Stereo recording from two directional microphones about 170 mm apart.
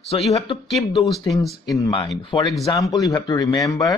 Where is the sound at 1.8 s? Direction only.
25° left (ahead or behind).